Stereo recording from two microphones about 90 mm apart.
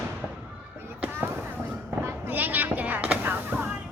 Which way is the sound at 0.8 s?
25° right (ahead or behind).